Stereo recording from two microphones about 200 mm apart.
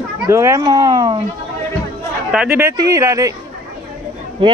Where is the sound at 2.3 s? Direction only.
5° right (ahead or behind).